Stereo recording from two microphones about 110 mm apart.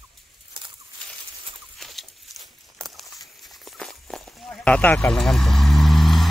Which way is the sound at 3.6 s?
5° left (ahead or behind).